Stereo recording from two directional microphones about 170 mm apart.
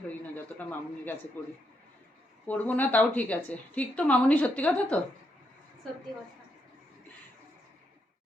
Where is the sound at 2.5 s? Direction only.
10° left (ahead or behind).